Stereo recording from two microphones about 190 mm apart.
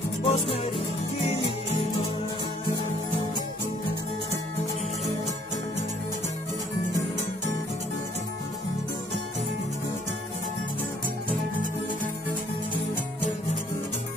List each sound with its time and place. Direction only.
0.2 s music: 30° left (ahead or behind)